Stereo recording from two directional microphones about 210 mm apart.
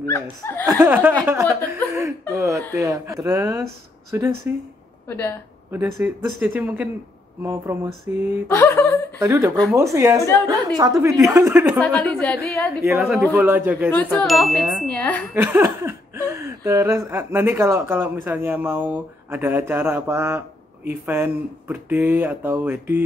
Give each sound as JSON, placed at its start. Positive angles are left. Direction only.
{"t": 0.0, "sound": "speech", "side_deg": 10}
{"t": 0.7, "sound": "speech", "side_deg": -10}
{"t": 5.0, "sound": "speech", "side_deg": 10}
{"t": 5.7, "sound": "speech", "side_deg": -10}
{"t": 8.5, "sound": "speech", "side_deg": 10}
{"t": 9.2, "sound": "speech", "side_deg": -10}
{"t": 11.8, "sound": "speech", "side_deg": 5}
{"t": 12.8, "sound": "speech", "side_deg": -10}
{"t": 15.3, "sound": "speech", "side_deg": -10}